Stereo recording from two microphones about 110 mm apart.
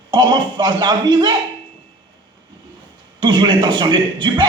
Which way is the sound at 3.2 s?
45° right (ahead or behind).